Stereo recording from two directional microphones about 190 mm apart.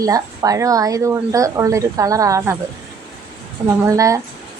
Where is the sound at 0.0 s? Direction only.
20° right (ahead or behind).